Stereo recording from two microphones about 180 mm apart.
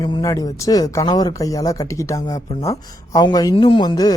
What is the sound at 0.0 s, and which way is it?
Speech, 20° left (ahead or behind).